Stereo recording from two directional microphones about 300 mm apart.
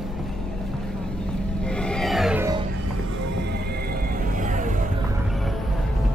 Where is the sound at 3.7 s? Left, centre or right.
Right.